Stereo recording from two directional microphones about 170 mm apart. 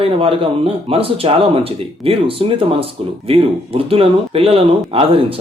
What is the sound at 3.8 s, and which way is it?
Speech, 35° right (ahead or behind).